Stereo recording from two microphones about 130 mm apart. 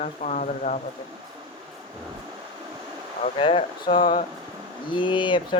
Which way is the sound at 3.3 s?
45° left (ahead or behind).